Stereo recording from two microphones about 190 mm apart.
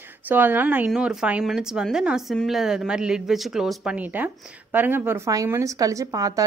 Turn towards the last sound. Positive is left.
turn(degrees=-20)  # may be behind; listen again after turning